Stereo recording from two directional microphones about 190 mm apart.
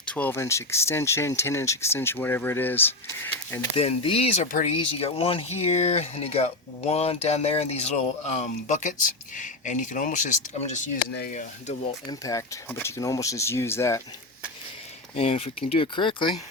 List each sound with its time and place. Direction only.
0.0 s speech: 5° left (ahead or behind)
3.8 s speech: 30° left (ahead or behind)
12.2 s speech: 15° left (ahead or behind)
15.1 s speech: 30° left (ahead or behind)